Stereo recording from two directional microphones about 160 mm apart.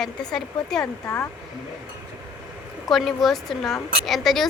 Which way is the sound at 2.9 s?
Centre (ahead or behind).